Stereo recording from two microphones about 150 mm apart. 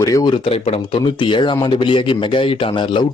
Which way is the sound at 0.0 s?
25° left (ahead or behind).